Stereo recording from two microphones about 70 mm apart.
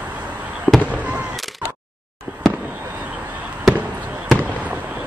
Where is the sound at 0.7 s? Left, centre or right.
Left.